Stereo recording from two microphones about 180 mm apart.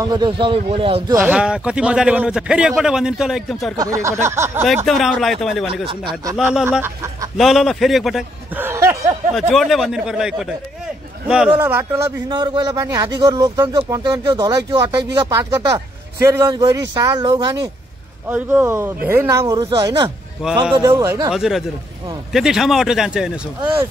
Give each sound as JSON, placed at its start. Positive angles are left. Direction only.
{"t": 0.0, "sound": "a man's voice", "side_deg": -25}
{"t": 1.2, "sound": "a man's voice", "side_deg": -5}
{"t": 3.7, "sound": "speech", "side_deg": -20}
{"t": 4.8, "sound": "a man's voice", "side_deg": 0}
{"t": 5.9, "sound": "a man's voice", "side_deg": -25}
{"t": 6.3, "sound": "speech", "side_deg": -5}
{"t": 7.3, "sound": "a man's voice", "side_deg": 0}
{"t": 8.5, "sound": "a sound", "side_deg": -15}
{"t": 9.3, "sound": "a man's voice", "side_deg": 0}
{"t": 18.3, "sound": "a man's voice", "side_deg": -10}
{"t": 21.0, "sound": "speech", "side_deg": -15}
{"t": 21.3, "sound": "a man's voice", "side_deg": -5}